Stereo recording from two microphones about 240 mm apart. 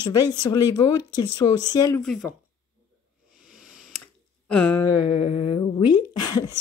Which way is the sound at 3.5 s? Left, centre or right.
Centre.